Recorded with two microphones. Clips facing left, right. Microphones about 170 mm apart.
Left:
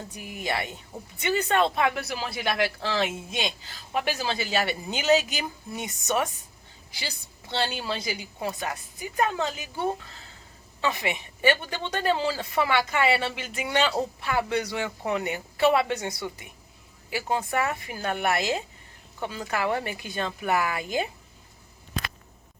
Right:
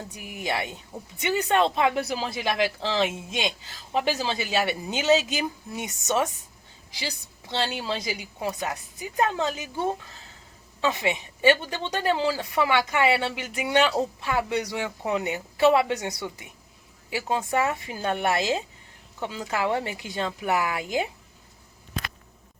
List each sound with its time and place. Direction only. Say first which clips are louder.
0.1 s a woman's voice: right 1 dB; 20° right (ahead or behind)